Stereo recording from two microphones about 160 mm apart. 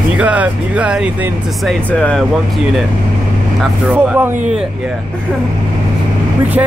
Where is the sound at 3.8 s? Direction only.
10° right (ahead or behind).